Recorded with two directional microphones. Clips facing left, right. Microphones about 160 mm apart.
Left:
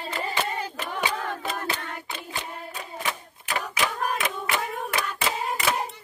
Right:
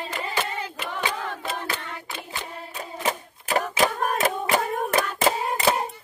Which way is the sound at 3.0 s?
40° right (ahead or behind).